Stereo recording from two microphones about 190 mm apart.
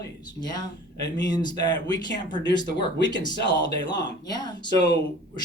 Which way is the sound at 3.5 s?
65° left (ahead or behind).